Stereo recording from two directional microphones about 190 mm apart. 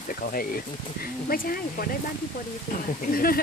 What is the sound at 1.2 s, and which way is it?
Speech, 50° left (ahead or behind).